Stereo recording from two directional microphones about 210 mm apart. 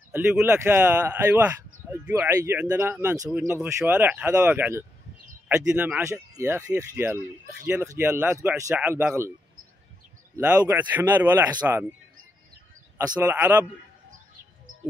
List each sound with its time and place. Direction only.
0.1 s speech: 5° right (ahead or behind)
10.3 s speech: 10° right (ahead or behind)
12.9 s speech: 10° right (ahead or behind)
14.7 s bird: 70° right (ahead or behind)